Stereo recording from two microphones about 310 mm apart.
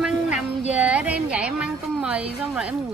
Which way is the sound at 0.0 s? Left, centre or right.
Centre.